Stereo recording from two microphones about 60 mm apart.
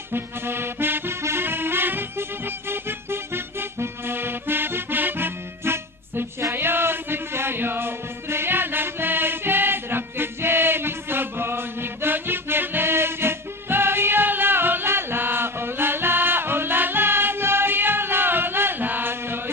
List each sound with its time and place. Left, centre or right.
0.1 s music: right